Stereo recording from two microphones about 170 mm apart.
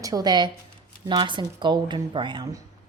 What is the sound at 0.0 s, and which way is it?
Speech, 20° right (ahead or behind).